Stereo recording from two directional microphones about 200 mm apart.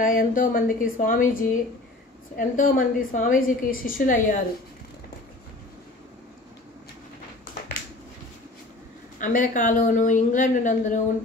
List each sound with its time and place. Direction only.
0.0 s a woman's voice: 45° left (ahead or behind)
9.2 s speech: 40° left (ahead or behind)